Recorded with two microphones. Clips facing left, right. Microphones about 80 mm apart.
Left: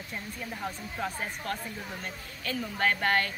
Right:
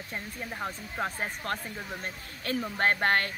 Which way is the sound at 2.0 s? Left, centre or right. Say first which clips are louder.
Even; right.